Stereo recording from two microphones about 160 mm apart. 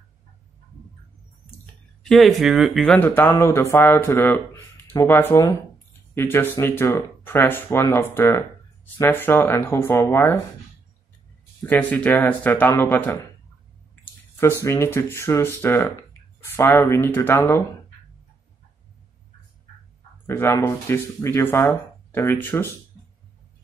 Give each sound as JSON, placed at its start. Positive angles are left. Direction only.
{"t": 2.0, "sound": "speech", "side_deg": 0}
{"t": 3.0, "sound": "speech", "side_deg": 10}
{"t": 11.6, "sound": "speech", "side_deg": 10}
{"t": 14.4, "sound": "speech", "side_deg": 15}
{"t": 20.2, "sound": "speech", "side_deg": 20}